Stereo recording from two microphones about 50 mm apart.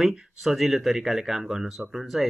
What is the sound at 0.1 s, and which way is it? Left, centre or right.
Speech, centre.